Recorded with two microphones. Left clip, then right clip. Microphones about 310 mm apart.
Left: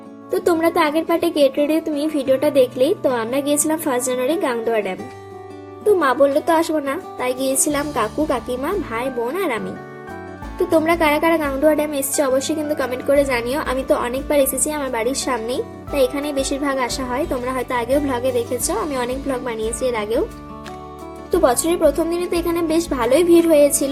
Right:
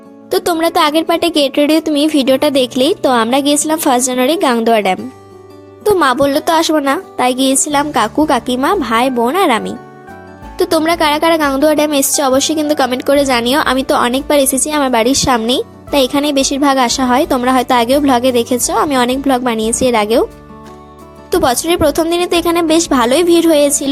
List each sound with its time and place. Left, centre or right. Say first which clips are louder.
0.3 s a woman's voice: right 4 dB; right
10.7 s a woman's voice: right 3 dB; right
21.2 s a woman's voice: right 4 dB; right